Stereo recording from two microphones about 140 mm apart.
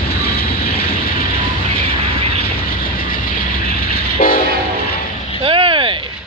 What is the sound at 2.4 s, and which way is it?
Train, 90° left.